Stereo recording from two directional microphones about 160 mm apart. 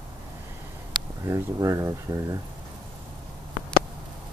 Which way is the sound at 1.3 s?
20° right (ahead or behind).